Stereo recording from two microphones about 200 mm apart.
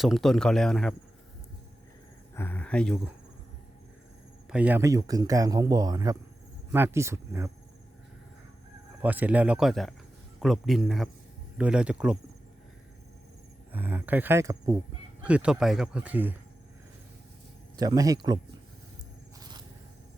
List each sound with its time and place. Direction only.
0.0 s speech: centre (ahead or behind)
2.3 s speech: 10° left (ahead or behind)
4.4 s speech: 5° right (ahead or behind)
9.0 s speech: 10° right (ahead or behind)
13.7 s speech: 10° right (ahead or behind)
17.7 s speech: 20° right (ahead or behind)
19.4 s a sound: 20° right (ahead or behind)